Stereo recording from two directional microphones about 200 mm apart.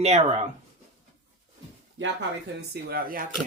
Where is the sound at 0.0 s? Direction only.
30° right (ahead or behind).